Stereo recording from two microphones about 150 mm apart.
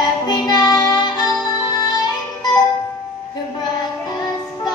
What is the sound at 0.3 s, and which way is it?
Music, 30° left (ahead or behind).